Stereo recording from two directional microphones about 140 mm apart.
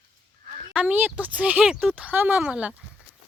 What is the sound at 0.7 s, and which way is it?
Speech, 10° right (ahead or behind).